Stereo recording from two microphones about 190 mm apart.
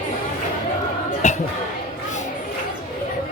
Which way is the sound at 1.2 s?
40° left (ahead or behind).